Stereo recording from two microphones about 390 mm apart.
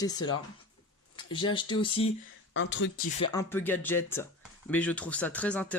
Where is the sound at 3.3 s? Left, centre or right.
Centre.